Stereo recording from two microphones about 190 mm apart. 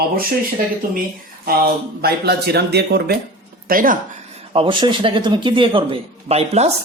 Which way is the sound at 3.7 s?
45° right (ahead or behind).